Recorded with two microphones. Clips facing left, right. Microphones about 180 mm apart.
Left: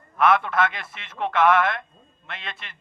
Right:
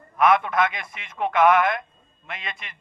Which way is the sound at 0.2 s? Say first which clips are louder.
Right 1 dB; 10° right (ahead or behind).